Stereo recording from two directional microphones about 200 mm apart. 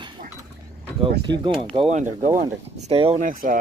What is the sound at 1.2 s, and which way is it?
Speech, 25° right (ahead or behind).